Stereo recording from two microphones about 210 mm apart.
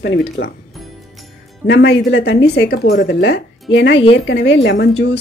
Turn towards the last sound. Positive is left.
turn(degrees=55)  # may be behind; listen again after turning